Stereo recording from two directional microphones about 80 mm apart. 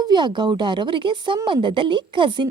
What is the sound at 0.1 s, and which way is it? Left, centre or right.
A woman's voice, right.